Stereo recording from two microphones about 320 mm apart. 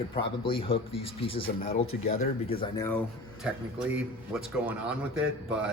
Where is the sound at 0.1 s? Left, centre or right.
Centre.